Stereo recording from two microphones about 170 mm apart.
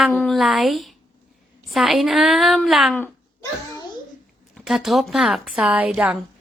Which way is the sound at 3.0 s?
20° left (ahead or behind).